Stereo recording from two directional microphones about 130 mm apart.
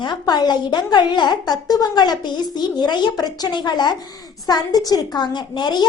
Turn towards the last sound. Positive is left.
turn(degrees=35)  # may be behind; listen again after turning